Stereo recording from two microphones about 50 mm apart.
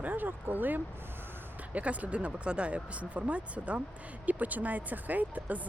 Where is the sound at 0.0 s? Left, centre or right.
Right.